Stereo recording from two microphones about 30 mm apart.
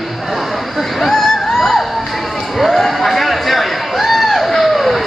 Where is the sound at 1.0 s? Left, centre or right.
Centre.